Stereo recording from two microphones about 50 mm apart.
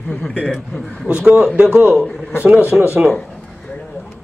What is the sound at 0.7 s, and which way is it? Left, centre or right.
Speech, centre.